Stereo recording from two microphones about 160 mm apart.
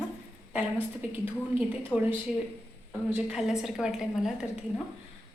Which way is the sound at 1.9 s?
20° left (ahead or behind).